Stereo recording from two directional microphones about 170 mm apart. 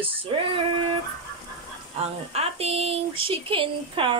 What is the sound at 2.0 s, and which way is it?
Speech, 40° right (ahead or behind).